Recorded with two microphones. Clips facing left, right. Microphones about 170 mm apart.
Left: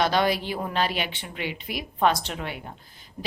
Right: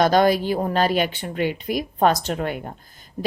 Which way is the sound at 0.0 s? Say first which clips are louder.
Right 6 dB; 45° right (ahead or behind).